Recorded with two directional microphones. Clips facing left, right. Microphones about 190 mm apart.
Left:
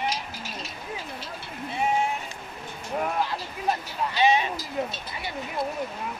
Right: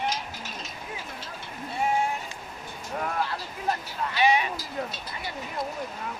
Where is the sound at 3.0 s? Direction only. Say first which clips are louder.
Left 2 dB; 15° left (ahead or behind).